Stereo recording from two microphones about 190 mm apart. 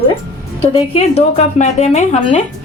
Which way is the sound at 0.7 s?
35° left (ahead or behind).